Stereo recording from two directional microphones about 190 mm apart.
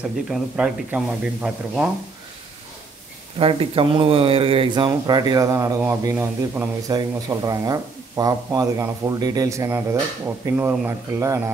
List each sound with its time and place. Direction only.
0.3 s speech: 5° right (ahead or behind)
3.3 s speech: 30° right (ahead or behind)